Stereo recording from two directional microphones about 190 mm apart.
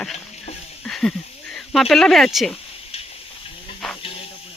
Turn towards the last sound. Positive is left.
turn(degrees=0)  # may be behind; listen again after turning